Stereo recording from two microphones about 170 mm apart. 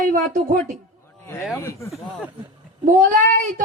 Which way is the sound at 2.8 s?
50° right (ahead or behind).